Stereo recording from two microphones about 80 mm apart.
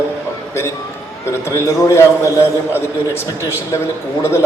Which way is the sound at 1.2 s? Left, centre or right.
Left.